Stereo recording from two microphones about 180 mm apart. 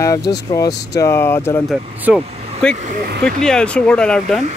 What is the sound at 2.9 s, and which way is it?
Speech, 60° right (ahead or behind).